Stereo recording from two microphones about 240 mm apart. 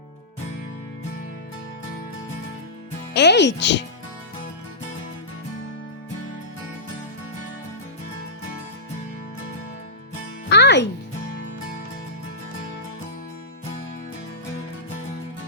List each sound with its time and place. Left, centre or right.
3.2 s a child's voice: left
10.5 s music: left